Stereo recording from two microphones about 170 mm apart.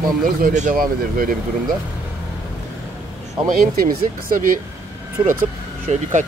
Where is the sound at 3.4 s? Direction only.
55° right (ahead or behind).